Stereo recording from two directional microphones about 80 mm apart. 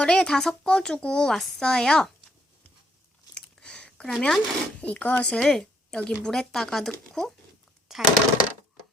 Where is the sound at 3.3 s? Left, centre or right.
Centre.